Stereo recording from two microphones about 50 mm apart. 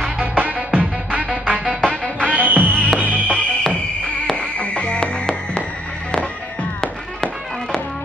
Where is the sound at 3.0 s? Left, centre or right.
Left.